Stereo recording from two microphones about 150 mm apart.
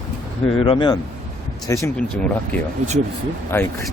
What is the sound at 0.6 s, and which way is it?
Speech, 35° left (ahead or behind).